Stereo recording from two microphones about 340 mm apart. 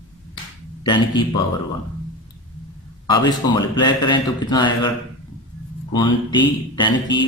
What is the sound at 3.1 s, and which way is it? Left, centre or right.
Speech, centre.